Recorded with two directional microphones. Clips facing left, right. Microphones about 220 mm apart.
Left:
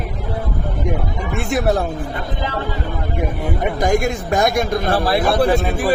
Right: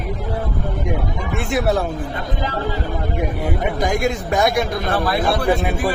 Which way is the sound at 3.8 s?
45° left (ahead or behind).